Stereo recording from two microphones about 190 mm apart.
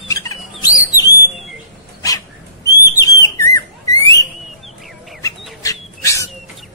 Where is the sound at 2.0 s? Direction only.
20° left (ahead or behind).